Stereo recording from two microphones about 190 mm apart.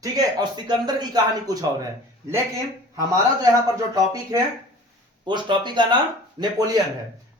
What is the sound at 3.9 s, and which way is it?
A man's voice, 20° right (ahead or behind).